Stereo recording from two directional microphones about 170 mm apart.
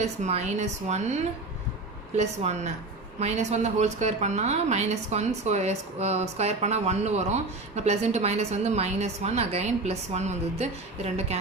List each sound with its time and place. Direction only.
0.0 s speech: 40° right (ahead or behind)